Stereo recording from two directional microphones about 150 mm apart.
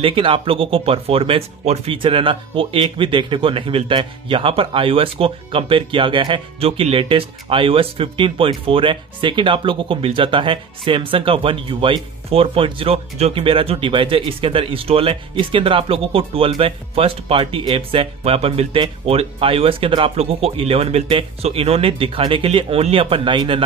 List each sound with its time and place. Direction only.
0.0 s speech: 35° right (ahead or behind)